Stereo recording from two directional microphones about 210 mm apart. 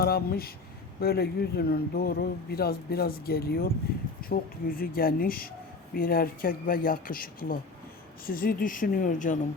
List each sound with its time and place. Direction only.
0.0 s speech: 45° left (ahead or behind)